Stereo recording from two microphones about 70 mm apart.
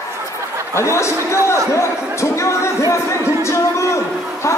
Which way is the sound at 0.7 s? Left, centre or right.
Left.